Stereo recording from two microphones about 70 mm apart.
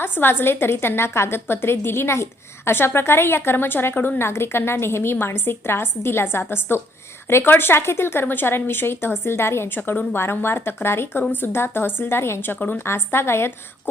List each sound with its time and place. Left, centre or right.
0.0 s speech: left
12.5 s a woman's voice: left
12.8 s speech: left